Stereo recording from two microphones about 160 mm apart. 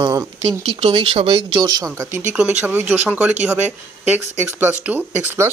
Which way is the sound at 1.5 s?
25° right (ahead or behind).